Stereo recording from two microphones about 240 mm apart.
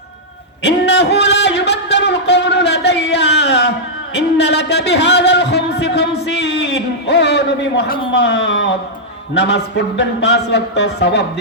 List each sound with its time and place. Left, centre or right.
0.6 s a sound: left
4.1 s music: left
8.1 s speech: left